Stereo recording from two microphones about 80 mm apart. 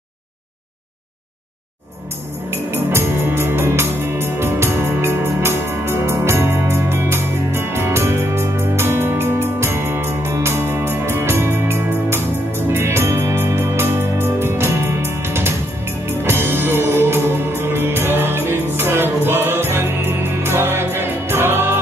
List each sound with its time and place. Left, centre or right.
2.5 s music: right